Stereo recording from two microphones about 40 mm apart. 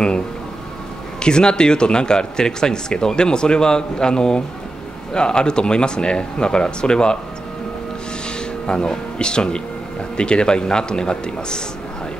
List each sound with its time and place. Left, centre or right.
1.2 s speech: left
8.6 s speech: left